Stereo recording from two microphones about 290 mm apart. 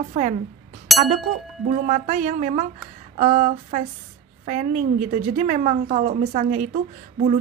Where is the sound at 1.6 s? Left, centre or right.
Right.